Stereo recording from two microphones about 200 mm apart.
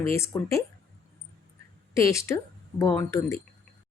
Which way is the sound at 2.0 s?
15° left (ahead or behind).